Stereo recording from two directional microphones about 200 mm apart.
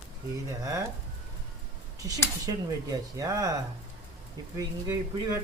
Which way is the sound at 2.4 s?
20° right (ahead or behind).